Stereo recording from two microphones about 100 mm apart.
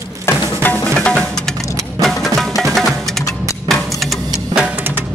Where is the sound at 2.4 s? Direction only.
Centre (ahead or behind).